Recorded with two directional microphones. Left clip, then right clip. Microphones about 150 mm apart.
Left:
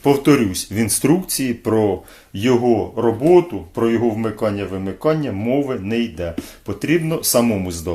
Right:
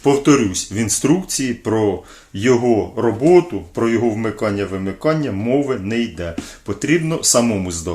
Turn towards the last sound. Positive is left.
turn(degrees=15)  # may be behind; listen again after turning